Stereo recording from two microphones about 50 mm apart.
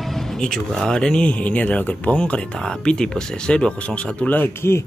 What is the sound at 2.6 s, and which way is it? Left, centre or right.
Speech, centre.